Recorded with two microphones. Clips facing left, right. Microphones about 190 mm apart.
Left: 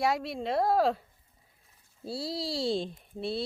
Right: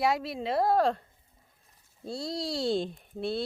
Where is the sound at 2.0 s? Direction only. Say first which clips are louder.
Even; 5° left (ahead or behind).